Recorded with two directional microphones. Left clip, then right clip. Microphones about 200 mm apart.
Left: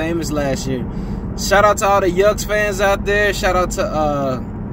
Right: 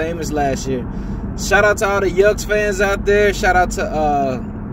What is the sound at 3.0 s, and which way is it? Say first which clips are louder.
Speech: right 2 dB; 10° left (ahead or behind).